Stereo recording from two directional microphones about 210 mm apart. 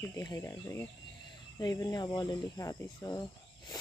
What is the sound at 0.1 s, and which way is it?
Speech, 15° left (ahead or behind).